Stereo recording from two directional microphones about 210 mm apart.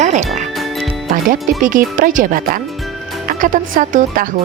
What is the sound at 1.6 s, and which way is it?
Speech, 40° right (ahead or behind).